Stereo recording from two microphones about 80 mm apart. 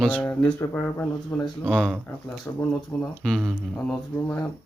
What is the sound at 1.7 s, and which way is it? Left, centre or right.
Speech, centre.